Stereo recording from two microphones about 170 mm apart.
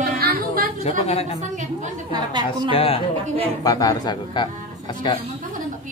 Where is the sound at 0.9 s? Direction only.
35° left (ahead or behind).